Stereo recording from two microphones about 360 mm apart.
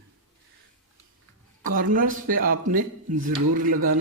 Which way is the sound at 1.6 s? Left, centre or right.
Right.